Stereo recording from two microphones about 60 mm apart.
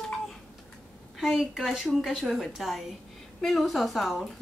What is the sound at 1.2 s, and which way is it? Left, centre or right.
Speech, centre.